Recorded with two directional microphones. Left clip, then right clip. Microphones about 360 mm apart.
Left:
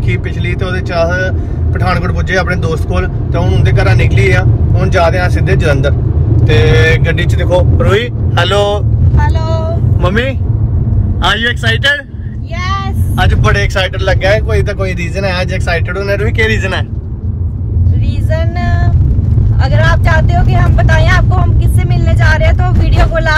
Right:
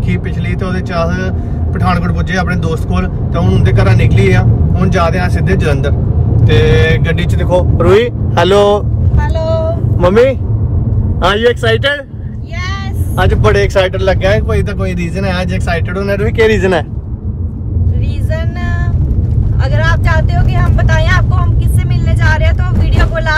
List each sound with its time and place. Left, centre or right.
0.1 s speech: centre; by 8.8 s right
9.2 s vehicle: centre
9.9 s a man's voice: right
13.1 s speech: right
19.6 s speech: centre